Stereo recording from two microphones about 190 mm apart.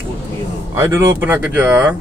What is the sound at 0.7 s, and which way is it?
Speech, 15° right (ahead or behind).